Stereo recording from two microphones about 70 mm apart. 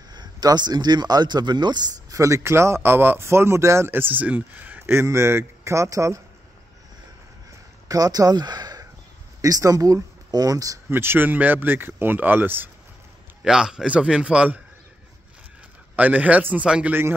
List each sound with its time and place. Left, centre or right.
0.1 s speech: right
2.1 s speech: right
7.9 s speech: right
9.4 s speech: right
10.9 s speech: right
13.4 s a man's voice: centre
16.0 s a man's voice: right